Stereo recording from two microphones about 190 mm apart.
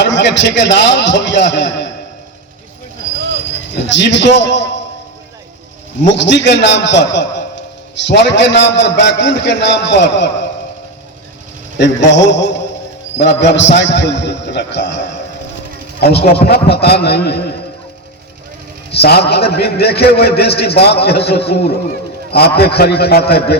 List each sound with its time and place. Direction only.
0.0 s a man's voice: 65° left (ahead or behind)
3.9 s a man's voice: 65° left (ahead or behind)
6.0 s a man's voice: 70° left (ahead or behind)
11.8 s a man's voice: 70° left (ahead or behind)
18.9 s a man's voice: 60° left (ahead or behind)